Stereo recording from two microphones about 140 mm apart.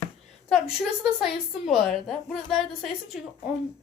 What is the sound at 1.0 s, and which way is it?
A woman's voice, 5° right (ahead or behind).